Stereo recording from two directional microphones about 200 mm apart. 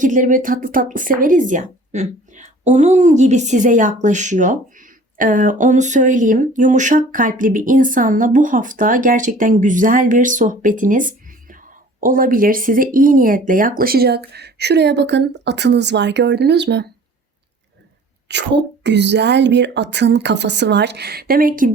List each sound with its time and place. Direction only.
0.0 s a woman's voice: 40° right (ahead or behind); by 16.9 s 60° right (ahead or behind)
18.3 s a woman's voice: 60° right (ahead or behind); by 21.7 s 45° right (ahead or behind)